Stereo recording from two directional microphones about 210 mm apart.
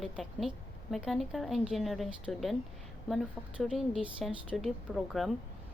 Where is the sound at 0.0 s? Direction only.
Centre (ahead or behind).